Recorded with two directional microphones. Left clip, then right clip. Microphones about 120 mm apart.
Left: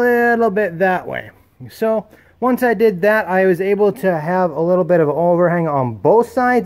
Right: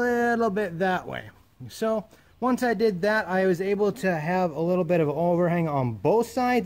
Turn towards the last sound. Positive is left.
turn(degrees=0)  # may be behind; listen again after turning